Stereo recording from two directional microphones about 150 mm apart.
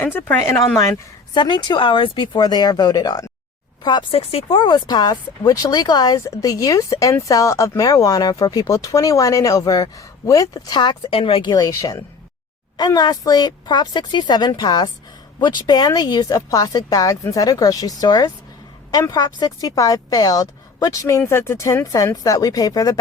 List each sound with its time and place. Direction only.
0.0 s speech: 15° left (ahead or behind)
3.8 s speech: 35° left (ahead or behind)
11.5 s speech: 20° left (ahead or behind)